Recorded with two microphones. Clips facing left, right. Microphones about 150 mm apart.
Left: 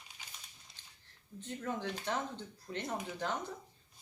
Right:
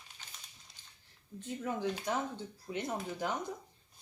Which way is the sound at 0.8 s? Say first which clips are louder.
Even; 10° right (ahead or behind).